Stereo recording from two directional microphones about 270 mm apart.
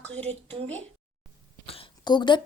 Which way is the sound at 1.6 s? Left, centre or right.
Centre.